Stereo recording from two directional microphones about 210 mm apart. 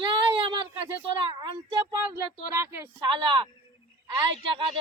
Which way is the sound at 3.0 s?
20° right (ahead or behind).